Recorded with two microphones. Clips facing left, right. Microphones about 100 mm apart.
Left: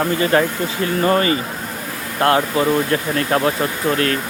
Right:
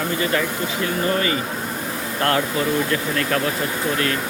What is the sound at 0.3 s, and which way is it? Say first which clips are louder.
Speech: left 5 dB; 45° left (ahead or behind).